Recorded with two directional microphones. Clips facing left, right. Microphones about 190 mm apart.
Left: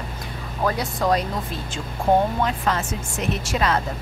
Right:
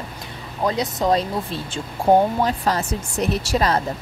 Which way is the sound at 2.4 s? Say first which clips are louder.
Right 2 dB; 35° right (ahead or behind).